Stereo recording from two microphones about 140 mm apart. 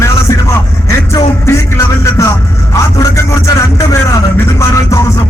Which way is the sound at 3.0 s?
25° left (ahead or behind).